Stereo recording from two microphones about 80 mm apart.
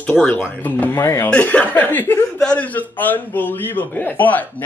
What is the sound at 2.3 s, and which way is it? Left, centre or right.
A man's voice, centre.